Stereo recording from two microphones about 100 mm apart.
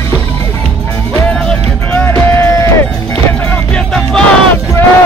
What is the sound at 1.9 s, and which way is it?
Music, 20° left (ahead or behind).